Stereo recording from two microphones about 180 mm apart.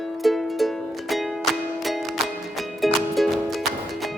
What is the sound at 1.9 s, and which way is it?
Music, centre (ahead or behind).